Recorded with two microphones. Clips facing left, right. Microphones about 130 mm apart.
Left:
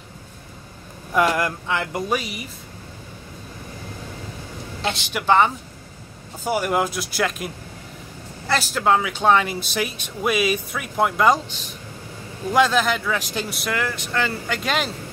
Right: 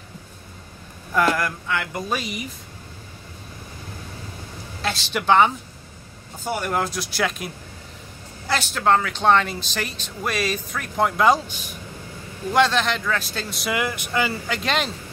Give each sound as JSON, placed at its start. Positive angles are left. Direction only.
{"t": 1.1, "sound": "speech", "side_deg": 20}
{"t": 5.1, "sound": "speech", "side_deg": 0}
{"t": 11.4, "sound": "speech", "side_deg": -10}
{"t": 12.5, "sound": "speech", "side_deg": 5}
{"t": 13.7, "sound": "speech", "side_deg": -15}
{"t": 14.3, "sound": "speech", "side_deg": 0}